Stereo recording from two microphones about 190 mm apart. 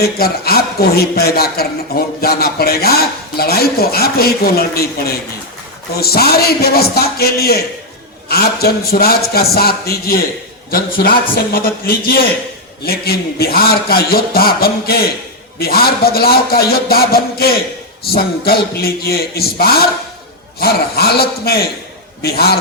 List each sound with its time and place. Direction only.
0.0 s a man's voice: 55° left (ahead or behind)